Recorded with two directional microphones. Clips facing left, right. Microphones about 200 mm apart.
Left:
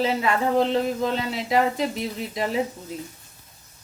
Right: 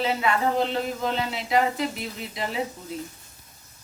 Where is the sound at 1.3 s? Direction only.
40° left (ahead or behind).